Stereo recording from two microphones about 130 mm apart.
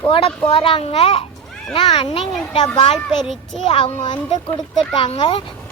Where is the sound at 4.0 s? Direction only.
35° left (ahead or behind).